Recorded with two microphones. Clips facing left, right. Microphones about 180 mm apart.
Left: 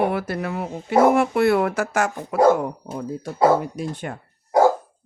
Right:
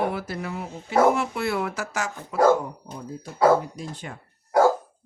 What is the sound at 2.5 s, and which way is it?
Speech, 70° left (ahead or behind).